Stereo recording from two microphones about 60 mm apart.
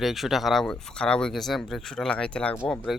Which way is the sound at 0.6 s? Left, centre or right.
Centre.